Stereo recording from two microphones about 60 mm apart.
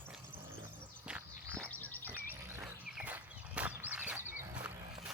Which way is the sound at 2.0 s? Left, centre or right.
Right.